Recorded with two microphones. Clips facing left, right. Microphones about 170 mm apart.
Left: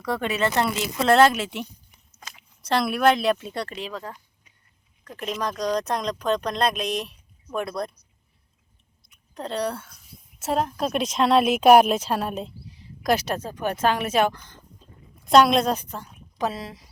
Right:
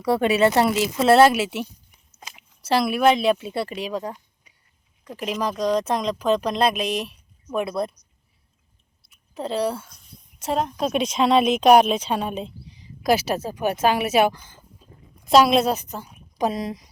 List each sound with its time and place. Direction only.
0.0 s speech: 10° right (ahead or behind)
2.1 s chewing: 20° right (ahead or behind)
2.6 s speech: 5° right (ahead or behind)
9.0 s chewing: 5° right (ahead or behind)
10.4 s a woman's voice: centre (ahead or behind); by 16.9 s 15° right (ahead or behind)